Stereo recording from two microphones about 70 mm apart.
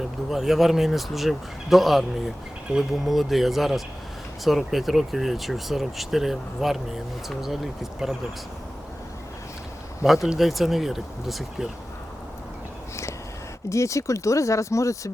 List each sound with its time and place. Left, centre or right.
0.3 s speech: centre
10.2 s speech: centre
13.7 s speech: left